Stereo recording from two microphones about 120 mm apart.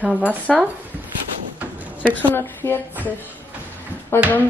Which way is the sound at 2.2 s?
20° left (ahead or behind).